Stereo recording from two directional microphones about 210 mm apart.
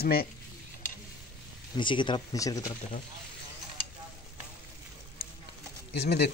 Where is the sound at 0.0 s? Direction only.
45° left (ahead or behind).